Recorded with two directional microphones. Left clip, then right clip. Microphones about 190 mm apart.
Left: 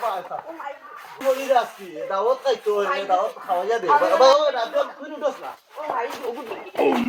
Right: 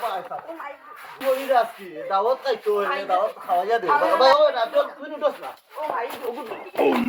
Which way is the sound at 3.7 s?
10° right (ahead or behind).